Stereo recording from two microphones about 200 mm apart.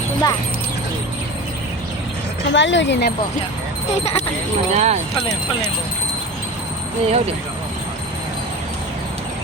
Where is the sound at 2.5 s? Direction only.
65° left (ahead or behind).